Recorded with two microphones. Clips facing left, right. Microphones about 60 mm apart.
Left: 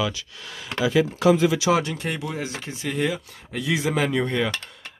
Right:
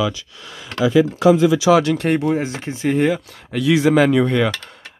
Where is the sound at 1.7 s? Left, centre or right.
Right.